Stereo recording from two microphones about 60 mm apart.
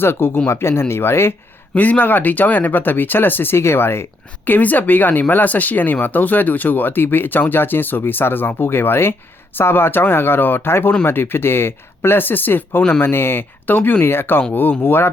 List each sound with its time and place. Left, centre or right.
0.0 s speech: left
1.7 s speech: left
4.4 s speech: left
13.7 s speech: left
14.0 s speech: left